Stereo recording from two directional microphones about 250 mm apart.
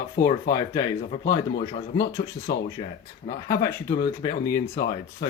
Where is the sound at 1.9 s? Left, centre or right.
Left.